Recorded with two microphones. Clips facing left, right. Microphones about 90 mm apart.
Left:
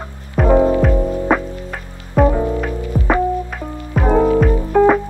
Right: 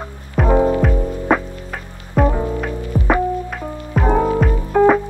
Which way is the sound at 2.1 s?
Centre (ahead or behind).